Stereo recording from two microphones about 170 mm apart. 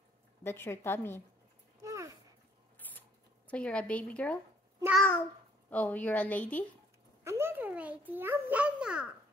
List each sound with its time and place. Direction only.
0.4 s a woman's voice: 15° left (ahead or behind)
1.8 s a sound: 20° right (ahead or behind)
2.9 s zipper: 10° left (ahead or behind)
4.9 s a woman's voice: 5° left (ahead or behind)
7.2 s a child's voice: 15° right (ahead or behind)